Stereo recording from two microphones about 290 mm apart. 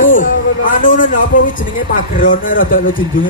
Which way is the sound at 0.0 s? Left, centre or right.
Left.